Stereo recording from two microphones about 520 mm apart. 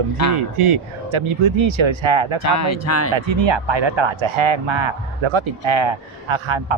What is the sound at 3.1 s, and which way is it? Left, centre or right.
Speech, right.